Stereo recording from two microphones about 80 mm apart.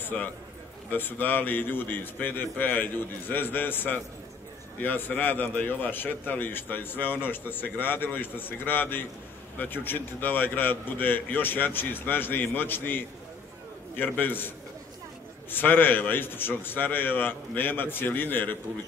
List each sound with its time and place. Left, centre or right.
0.0 s a man's voice: centre
15.5 s a man's voice: left